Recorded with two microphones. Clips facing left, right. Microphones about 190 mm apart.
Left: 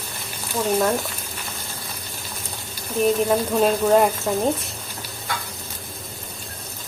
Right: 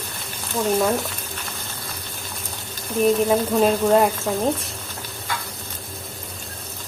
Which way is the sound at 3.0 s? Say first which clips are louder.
Right 1 dB; centre (ahead or behind).